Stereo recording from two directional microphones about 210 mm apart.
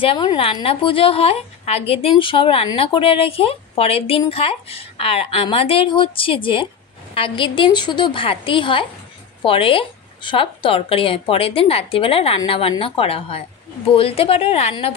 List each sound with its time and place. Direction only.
0.0 s a woman's voice: 25° left (ahead or behind)